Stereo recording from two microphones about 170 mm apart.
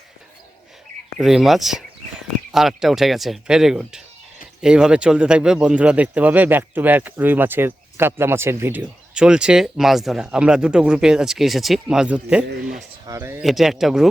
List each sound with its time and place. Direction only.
1.2 s speech: centre (ahead or behind)
13.4 s speech: centre (ahead or behind)